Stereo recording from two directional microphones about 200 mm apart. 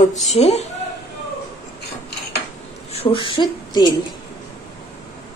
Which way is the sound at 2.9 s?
30° left (ahead or behind).